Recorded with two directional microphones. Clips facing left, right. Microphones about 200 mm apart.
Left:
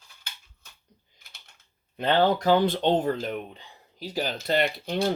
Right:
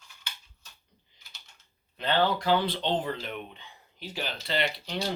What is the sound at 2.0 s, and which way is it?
Speech, 45° left (ahead or behind).